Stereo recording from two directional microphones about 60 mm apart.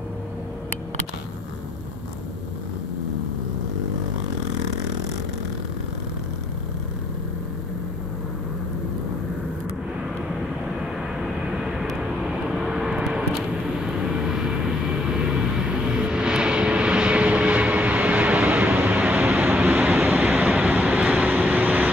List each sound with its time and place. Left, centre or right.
11.5 s vehicle: centre; by 21.9 s right